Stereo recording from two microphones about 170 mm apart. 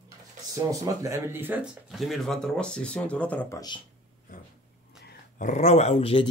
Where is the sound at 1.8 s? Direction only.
Centre (ahead or behind).